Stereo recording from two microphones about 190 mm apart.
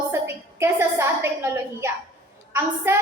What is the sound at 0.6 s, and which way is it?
Speech, 15° right (ahead or behind).